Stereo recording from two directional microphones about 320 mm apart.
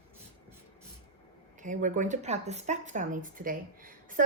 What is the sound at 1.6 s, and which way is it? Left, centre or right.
Speech, right.